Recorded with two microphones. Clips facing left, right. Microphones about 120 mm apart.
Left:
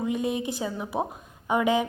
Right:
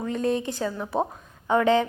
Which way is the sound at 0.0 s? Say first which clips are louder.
Right 2 dB; 10° left (ahead or behind).